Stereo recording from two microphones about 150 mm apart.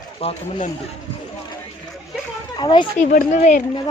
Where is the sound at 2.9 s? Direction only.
60° left (ahead or behind).